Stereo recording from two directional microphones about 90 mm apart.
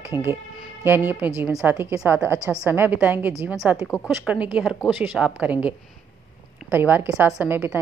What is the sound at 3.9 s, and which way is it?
Speech, 40° left (ahead or behind).